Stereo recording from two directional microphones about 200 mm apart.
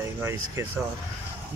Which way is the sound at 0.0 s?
10° right (ahead or behind).